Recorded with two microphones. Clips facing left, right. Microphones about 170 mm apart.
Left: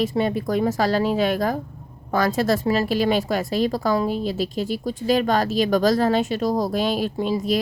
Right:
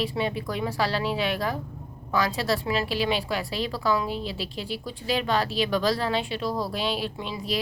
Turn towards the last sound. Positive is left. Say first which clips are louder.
# left 9 dB
turn(degrees=45)  # may be behind; listen again after turning